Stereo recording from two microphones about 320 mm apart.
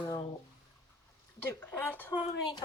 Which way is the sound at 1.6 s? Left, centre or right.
Centre.